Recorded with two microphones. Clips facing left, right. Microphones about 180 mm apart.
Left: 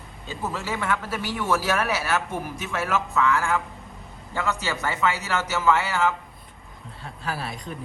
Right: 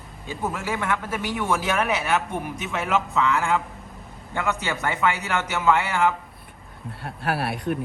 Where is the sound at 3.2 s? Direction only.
15° right (ahead or behind).